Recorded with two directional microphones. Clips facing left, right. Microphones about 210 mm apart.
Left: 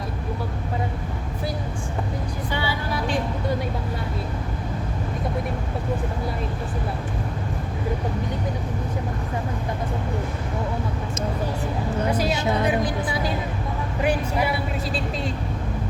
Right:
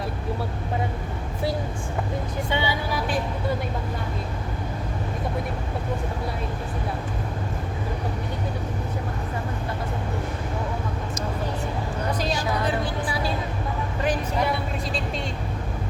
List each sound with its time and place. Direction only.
2.5 s speech: 20° right (ahead or behind)
12.3 s a woman's voice: 20° left (ahead or behind)